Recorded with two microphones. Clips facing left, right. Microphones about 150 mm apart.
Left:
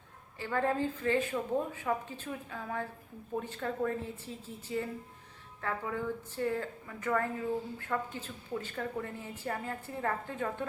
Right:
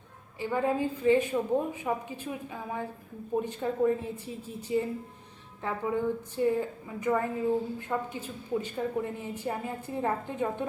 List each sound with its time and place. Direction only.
0.3 s a woman's voice: 15° right (ahead or behind)